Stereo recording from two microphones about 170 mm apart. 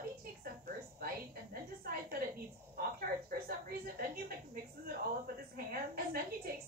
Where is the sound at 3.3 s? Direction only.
60° right (ahead or behind).